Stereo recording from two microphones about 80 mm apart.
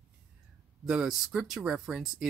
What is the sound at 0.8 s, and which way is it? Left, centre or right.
Speech, centre.